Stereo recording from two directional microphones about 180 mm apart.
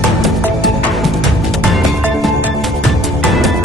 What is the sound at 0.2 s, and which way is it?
Music, centre (ahead or behind).